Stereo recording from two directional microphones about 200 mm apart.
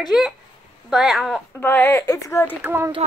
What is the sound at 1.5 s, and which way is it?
Speech, 10° left (ahead or behind).